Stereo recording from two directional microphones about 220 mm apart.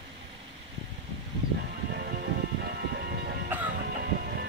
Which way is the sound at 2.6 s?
45° right (ahead or behind).